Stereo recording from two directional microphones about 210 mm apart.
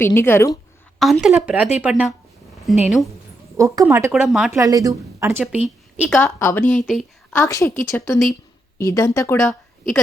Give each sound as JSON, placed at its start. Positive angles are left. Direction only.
{"t": 0.0, "sound": "speech", "side_deg": 10}
{"t": 0.9, "sound": "a woman's voice", "side_deg": 0}
{"t": 3.8, "sound": "a woman's voice", "side_deg": -5}
{"t": 4.5, "sound": "a woman's voice", "side_deg": -15}
{"t": 6.2, "sound": "speech", "side_deg": 10}
{"t": 7.3, "sound": "a woman's voice", "side_deg": 15}